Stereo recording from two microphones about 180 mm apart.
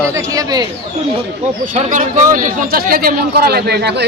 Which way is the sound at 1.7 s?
45° right (ahead or behind).